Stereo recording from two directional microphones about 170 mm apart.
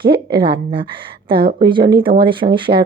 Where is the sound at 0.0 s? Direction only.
30° right (ahead or behind).